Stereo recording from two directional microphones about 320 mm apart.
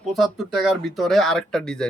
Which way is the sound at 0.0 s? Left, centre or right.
Centre.